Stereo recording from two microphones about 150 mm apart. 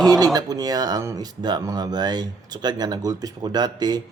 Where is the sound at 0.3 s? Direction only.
25° right (ahead or behind).